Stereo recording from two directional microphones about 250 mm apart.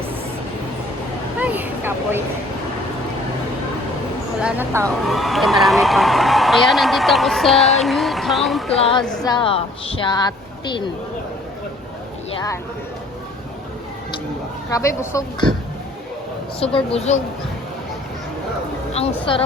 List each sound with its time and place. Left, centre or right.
1.4 s vehicle: centre
4.4 s a man's voice: centre
8.8 s a woman's voice: left
14.7 s speech: centre
16.6 s a woman's voice: left
18.9 s a woman's voice: left